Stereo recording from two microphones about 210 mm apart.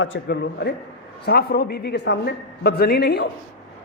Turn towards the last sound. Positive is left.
turn(degrees=50)  # may be behind; listen again after turning